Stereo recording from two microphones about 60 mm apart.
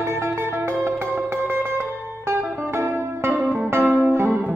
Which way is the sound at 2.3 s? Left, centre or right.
Right.